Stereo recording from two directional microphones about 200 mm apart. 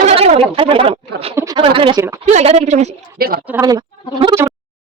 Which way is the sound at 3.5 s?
15° right (ahead or behind).